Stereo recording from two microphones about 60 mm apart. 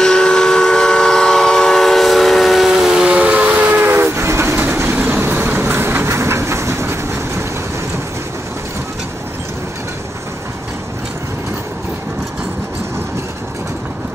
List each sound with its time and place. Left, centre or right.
0.0 s train: centre
2.9 s vehicle: centre
3.4 s train: right
4.9 s vehicle: right
5.2 s train: right